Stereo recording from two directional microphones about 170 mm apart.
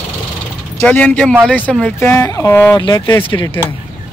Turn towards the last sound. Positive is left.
turn(degrees=25)  # may be behind; listen again after turning